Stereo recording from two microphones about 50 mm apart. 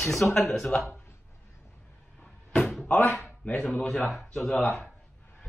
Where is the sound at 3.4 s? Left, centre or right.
Left.